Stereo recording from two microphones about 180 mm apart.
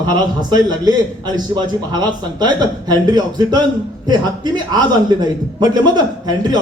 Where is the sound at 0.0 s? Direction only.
20° right (ahead or behind).